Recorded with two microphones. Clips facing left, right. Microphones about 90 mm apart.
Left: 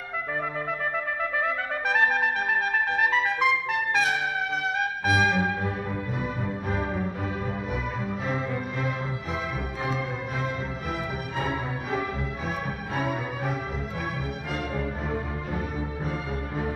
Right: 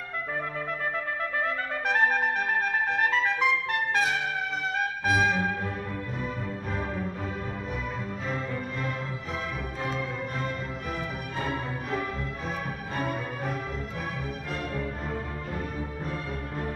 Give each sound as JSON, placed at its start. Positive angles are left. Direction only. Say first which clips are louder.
{"t": 1.4, "sound": "trumpet", "louder": "left 2 dB", "side_deg": 0}
{"t": 4.7, "sound": "music", "louder": "even", "side_deg": 5}
{"t": 9.8, "sound": "music", "louder": "left 1 dB", "side_deg": 5}
{"t": 14.8, "sound": "music", "louder": "left 3 dB", "side_deg": 5}